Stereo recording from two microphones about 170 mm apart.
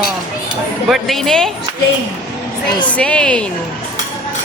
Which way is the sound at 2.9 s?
5° left (ahead or behind).